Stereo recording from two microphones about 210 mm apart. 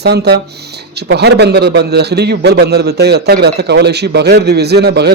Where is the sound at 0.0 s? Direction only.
50° right (ahead or behind).